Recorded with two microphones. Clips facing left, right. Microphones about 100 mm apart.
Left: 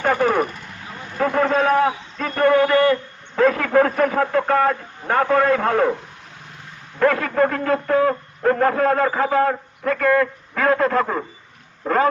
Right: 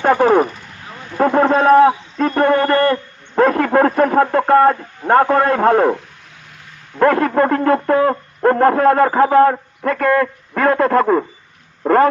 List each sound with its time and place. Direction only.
0.0 s vehicle: 45° right (ahead or behind)
1.2 s a man's voice: 40° right (ahead or behind)
7.0 s speech: 45° right (ahead or behind)